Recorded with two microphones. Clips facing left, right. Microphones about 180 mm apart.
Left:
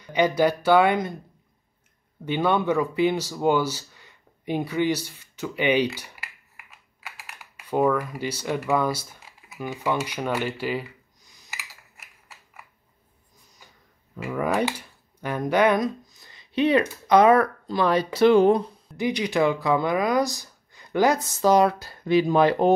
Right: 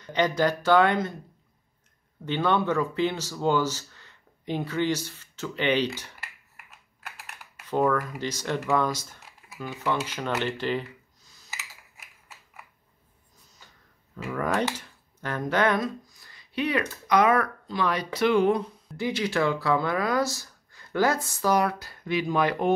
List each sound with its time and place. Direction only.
0.0 s speech: 10° left (ahead or behind)
2.2 s speech: 10° left (ahead or behind)
5.9 s computer keyboard: 10° left (ahead or behind)
14.1 s speech: 10° left (ahead or behind); by 18.6 s 35° left (ahead or behind)
18.9 s speech: 15° left (ahead or behind)